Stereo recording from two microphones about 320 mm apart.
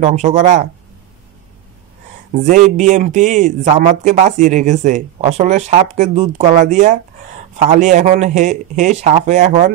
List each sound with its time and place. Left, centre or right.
0.0 s a man's voice: right
2.3 s a man's voice: right